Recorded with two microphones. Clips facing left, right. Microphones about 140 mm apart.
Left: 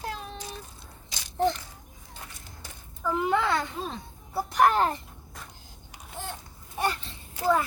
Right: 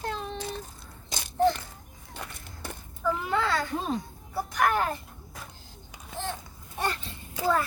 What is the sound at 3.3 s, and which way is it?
A child's voice, 20° left (ahead or behind).